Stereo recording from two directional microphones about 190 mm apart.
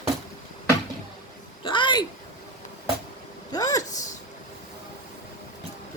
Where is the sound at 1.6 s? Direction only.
25° left (ahead or behind).